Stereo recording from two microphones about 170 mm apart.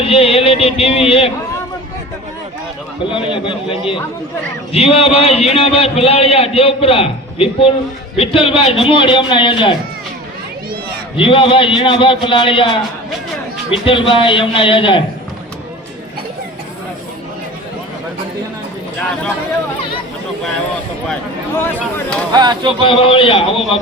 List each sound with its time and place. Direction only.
0.0 s a man's voice: 35° left (ahead or behind)
3.1 s a man's voice: 30° left (ahead or behind)
11.2 s a man's voice: 30° left (ahead or behind)
13.8 s a man's voice: 30° left (ahead or behind)
21.5 s speech: 15° left (ahead or behind)
22.3 s speech: 25° right (ahead or behind)
22.9 s a man's voice: 30° left (ahead or behind)